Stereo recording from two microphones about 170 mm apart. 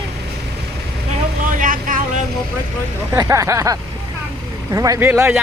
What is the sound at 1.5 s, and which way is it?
Vehicle, 50° right (ahead or behind).